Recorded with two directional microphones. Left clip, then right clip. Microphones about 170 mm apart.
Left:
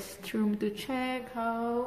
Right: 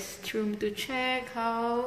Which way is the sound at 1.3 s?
10° left (ahead or behind).